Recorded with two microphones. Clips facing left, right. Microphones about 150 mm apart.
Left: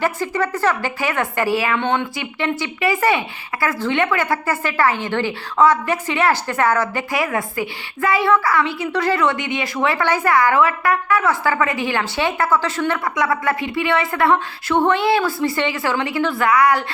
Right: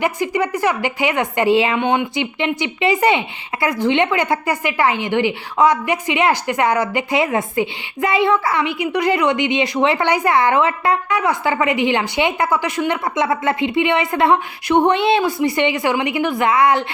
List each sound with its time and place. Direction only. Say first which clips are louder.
0.0 s a woman's voice: right 2 dB; 15° right (ahead or behind)